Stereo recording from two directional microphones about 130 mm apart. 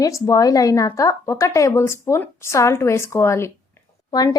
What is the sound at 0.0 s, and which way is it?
A woman's voice, 25° left (ahead or behind).